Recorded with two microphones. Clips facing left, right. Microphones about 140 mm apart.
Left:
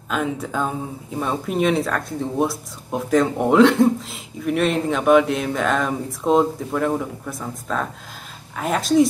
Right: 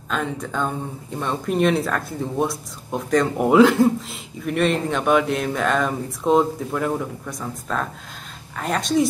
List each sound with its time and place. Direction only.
0.1 s speech: 5° left (ahead or behind)